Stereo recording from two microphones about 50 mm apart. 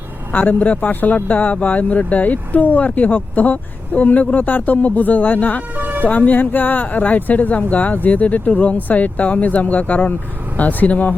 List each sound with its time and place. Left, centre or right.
0.3 s speech: left
5.7 s music: right
6.1 s speech: left